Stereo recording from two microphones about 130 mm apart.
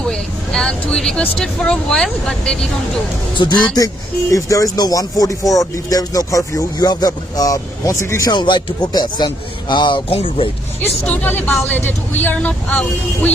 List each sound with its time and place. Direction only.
0.1 s speech: 5° left (ahead or behind)
3.3 s speech: 35° left (ahead or behind)
4.3 s speech: 25° left (ahead or behind)
8.3 s speech: 35° left (ahead or behind)
10.8 s speech: 10° left (ahead or behind)